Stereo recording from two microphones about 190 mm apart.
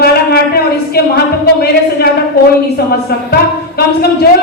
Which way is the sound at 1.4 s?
55° left (ahead or behind).